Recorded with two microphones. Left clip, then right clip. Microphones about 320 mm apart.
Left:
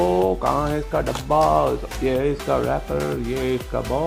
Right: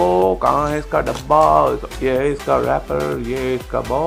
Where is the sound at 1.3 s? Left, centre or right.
Right.